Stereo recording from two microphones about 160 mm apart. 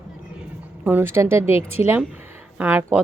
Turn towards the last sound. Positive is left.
turn(degrees=-15)  # may be behind; listen again after turning